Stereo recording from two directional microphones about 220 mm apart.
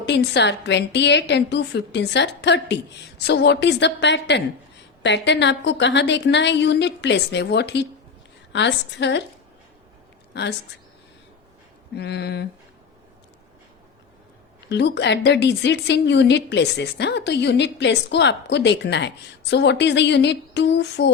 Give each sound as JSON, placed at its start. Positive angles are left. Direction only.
{"t": 0.0, "sound": "a woman's voice", "side_deg": 50}
{"t": 10.3, "sound": "a woman's voice", "side_deg": 50}
{"t": 11.9, "sound": "a woman's voice", "side_deg": 50}
{"t": 14.7, "sound": "a woman's voice", "side_deg": 50}